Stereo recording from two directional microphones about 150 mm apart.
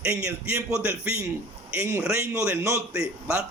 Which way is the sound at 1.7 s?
20° right (ahead or behind).